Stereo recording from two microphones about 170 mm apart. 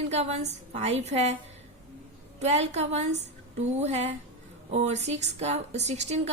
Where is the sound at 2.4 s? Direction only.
40° right (ahead or behind).